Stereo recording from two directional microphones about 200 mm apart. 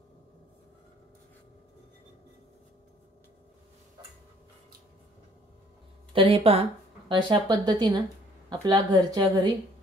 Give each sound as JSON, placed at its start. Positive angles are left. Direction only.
{"t": 6.1, "sound": "a woman's voice", "side_deg": -30}